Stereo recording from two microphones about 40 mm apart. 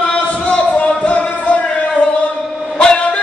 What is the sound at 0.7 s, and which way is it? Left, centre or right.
Music, left.